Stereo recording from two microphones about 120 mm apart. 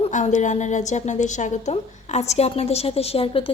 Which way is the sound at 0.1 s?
90° left.